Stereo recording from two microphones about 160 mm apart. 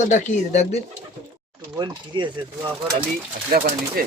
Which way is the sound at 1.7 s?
30° right (ahead or behind).